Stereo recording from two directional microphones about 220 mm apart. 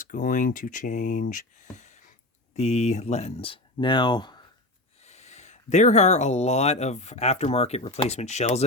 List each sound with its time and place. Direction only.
0.0 s speech: 35° left (ahead or behind)
1.7 s a sound: 30° left (ahead or behind)
2.6 s speech: 30° left (ahead or behind)
5.0 s speech: 30° left (ahead or behind)